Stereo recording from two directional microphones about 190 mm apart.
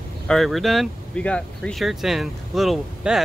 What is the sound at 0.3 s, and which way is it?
Speech, centre (ahead or behind).